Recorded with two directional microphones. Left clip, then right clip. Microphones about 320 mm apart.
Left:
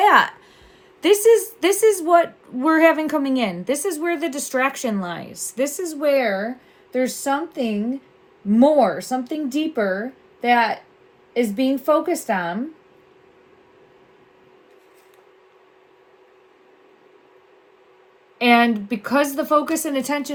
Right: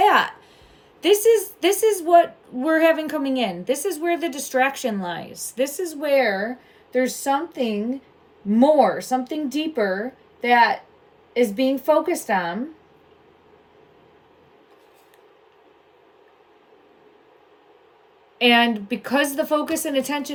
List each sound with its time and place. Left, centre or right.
0.0 s a sound: left
1.0 s a woman's voice: centre
18.3 s speech: centre